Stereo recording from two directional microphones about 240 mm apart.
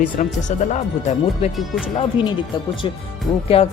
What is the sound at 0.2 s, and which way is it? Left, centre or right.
Speech, left.